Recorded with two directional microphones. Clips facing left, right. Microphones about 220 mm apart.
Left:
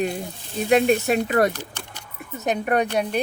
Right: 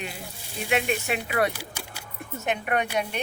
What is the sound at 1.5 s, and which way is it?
Keys jangling, 10° right (ahead or behind).